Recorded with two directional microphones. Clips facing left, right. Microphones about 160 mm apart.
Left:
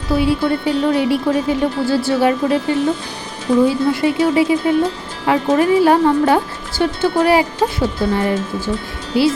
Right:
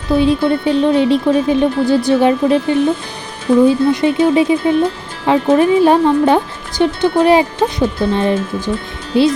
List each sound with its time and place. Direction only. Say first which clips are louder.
0.1 s speech: right 3 dB; 20° right (ahead or behind)